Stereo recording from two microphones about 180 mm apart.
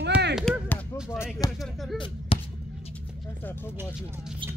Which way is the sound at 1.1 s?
15° left (ahead or behind).